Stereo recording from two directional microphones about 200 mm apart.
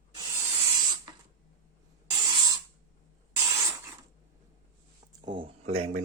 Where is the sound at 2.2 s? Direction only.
20° right (ahead or behind).